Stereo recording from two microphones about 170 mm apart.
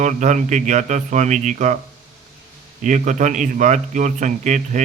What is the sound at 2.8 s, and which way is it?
Speech, 45° right (ahead or behind).